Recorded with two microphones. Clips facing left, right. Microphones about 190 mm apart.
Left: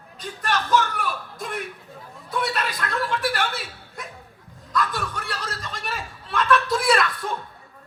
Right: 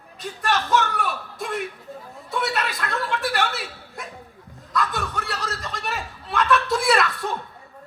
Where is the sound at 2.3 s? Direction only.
25° right (ahead or behind).